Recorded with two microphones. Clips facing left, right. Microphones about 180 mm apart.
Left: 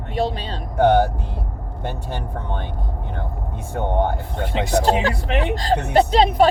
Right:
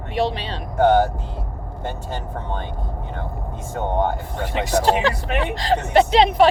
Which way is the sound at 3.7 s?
60° left (ahead or behind).